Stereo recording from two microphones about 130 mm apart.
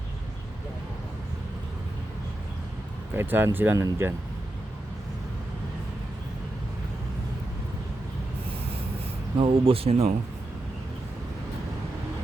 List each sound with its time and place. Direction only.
3.2 s speech: 15° right (ahead or behind)
9.4 s speech: 45° right (ahead or behind)